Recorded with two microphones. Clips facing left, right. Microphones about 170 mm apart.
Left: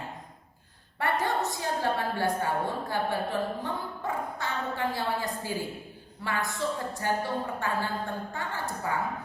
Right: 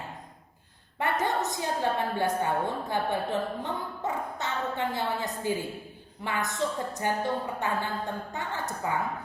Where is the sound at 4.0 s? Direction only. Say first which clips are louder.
Right 1 dB; 20° right (ahead or behind).